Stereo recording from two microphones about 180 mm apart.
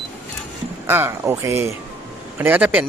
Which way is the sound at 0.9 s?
10° right (ahead or behind).